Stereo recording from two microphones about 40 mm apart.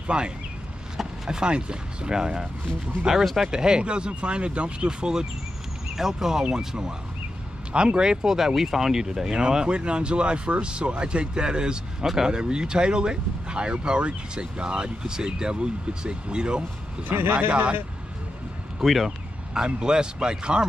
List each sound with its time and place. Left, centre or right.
0.0 s speech: right
0.9 s a sound: centre
1.4 s speech: right
3.4 s speech: centre
17.1 s a man's voice: right
17.5 s speech: right
18.9 s speech: centre
19.5 s speech: centre